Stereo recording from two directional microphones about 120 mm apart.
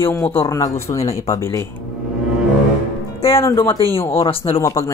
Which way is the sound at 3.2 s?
25° left (ahead or behind).